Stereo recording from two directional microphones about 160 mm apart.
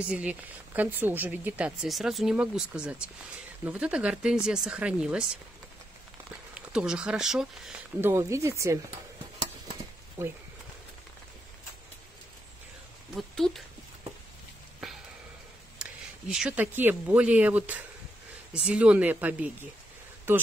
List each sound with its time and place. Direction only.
0.1 s speech: 10° right (ahead or behind)
6.5 s speech: 5° right (ahead or behind)
8.0 s speech: 15° right (ahead or behind)
13.1 s speech: centre (ahead or behind)
15.8 s speech: 5° right (ahead or behind)